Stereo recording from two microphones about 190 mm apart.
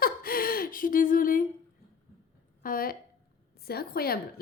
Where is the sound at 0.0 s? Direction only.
50° left (ahead or behind).